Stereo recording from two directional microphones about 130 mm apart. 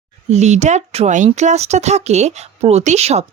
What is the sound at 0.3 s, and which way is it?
A woman's voice, 60° right (ahead or behind).